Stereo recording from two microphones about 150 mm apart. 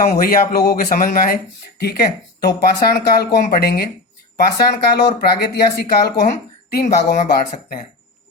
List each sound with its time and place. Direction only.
0.0 s speech: 70° left (ahead or behind)
1.8 s speech: 90° left; by 7.9 s 70° left (ahead or behind)